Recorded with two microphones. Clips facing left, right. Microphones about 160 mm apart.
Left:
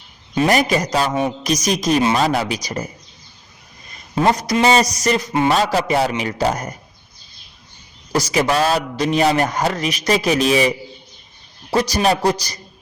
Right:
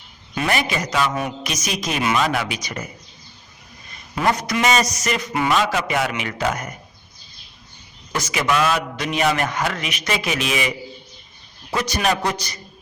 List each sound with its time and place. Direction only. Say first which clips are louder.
0.3 s a man's voice: left 6 dB; 40° left (ahead or behind)
4.1 s a man's voice: left 4 dB; 25° left (ahead or behind)
8.1 s a man's voice: left 4 dB; 35° left (ahead or behind)